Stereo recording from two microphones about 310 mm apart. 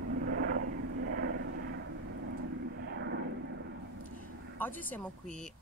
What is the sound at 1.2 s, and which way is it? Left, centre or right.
Vehicle, right.